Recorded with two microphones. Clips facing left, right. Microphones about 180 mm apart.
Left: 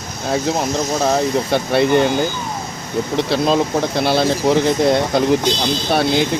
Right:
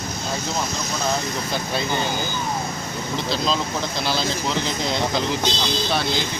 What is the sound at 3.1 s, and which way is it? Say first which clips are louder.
Speech: left 8 dB; 60° left (ahead or behind).